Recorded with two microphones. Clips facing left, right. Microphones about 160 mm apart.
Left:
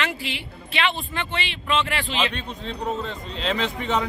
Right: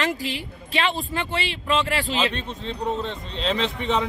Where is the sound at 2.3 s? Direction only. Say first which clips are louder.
Right 1 dB; centre (ahead or behind).